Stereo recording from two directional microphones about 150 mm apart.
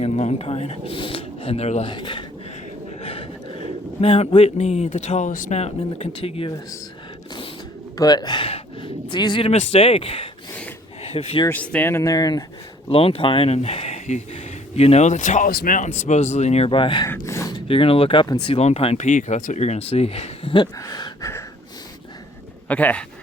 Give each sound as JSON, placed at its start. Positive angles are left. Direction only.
{"t": 0.0, "sound": "speech", "side_deg": 45}
{"t": 1.9, "sound": "speech", "side_deg": 30}
{"t": 3.0, "sound": "a sound", "side_deg": 40}
{"t": 4.0, "sound": "speech", "side_deg": 45}
{"t": 7.9, "sound": "speech", "side_deg": 25}
{"t": 11.4, "sound": "speech", "side_deg": 10}
{"t": 12.9, "sound": "speech", "side_deg": 40}
{"t": 16.0, "sound": "speech", "side_deg": 50}
{"t": 17.2, "sound": "gasp", "side_deg": 20}
{"t": 17.7, "sound": "speech", "side_deg": 40}
{"t": 19.0, "sound": "speech", "side_deg": 60}
{"t": 20.7, "sound": "a sound", "side_deg": 20}
{"t": 22.7, "sound": "speech", "side_deg": 10}